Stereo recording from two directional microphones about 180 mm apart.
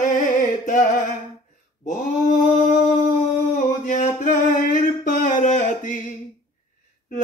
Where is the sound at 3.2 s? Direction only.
45° left (ahead or behind).